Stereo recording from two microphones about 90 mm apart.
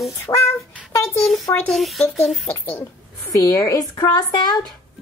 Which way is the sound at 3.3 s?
45° left (ahead or behind).